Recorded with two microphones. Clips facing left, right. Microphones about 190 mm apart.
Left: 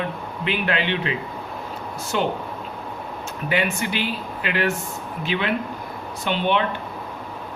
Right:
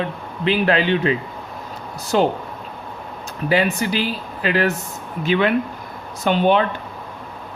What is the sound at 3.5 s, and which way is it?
Speech, 35° right (ahead or behind).